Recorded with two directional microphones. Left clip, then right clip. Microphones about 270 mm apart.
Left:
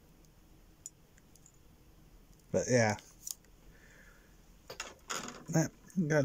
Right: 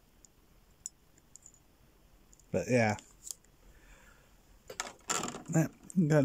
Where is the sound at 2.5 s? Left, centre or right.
Centre.